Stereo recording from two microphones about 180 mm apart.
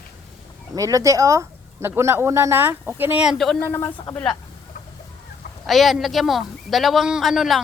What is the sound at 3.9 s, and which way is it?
Speech, 10° left (ahead or behind).